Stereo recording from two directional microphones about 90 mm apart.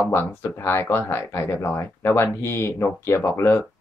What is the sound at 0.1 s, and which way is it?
Speech, 25° left (ahead or behind).